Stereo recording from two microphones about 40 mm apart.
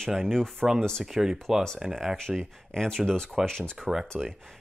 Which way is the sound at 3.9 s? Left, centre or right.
Centre.